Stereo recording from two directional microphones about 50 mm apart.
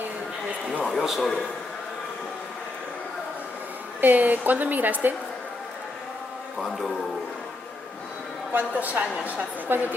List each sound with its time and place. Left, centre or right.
0.9 s a man's voice: centre
4.0 s speech: right
6.6 s a man's voice: centre
8.5 s speech: right